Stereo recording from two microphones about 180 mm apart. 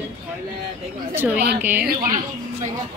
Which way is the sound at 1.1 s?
10° right (ahead or behind).